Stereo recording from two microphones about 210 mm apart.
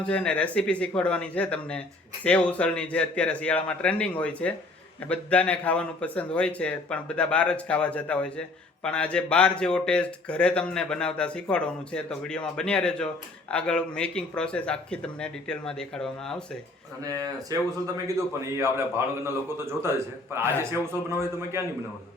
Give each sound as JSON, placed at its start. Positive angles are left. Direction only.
{"t": 0.0, "sound": "speech", "side_deg": 5}
{"t": 17.0, "sound": "a man's voice", "side_deg": -15}